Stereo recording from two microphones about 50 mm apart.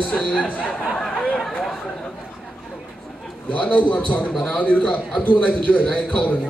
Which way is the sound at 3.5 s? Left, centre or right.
Left.